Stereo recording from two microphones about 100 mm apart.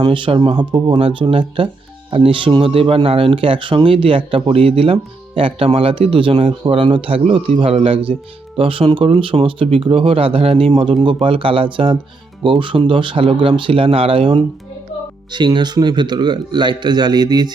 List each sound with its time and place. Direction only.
0.0 s speech: 55° right (ahead or behind)
0.9 s speech: 70° right (ahead or behind)
6.8 s speech: 60° right (ahead or behind)
11.0 s speech: 60° right (ahead or behind)
15.3 s a man's voice: 50° right (ahead or behind)